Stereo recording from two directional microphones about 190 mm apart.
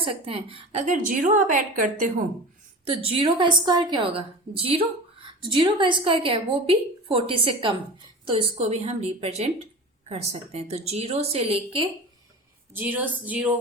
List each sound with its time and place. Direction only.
0.0 s a woman's voice: 30° right (ahead or behind)
2.9 s a woman's voice: 30° right (ahead or behind)
5.2 s a woman's voice: 25° right (ahead or behind)
12.7 s speech: 10° right (ahead or behind)